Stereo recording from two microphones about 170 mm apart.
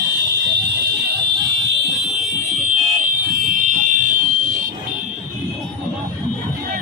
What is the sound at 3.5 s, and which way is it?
Fire alarm, 50° right (ahead or behind).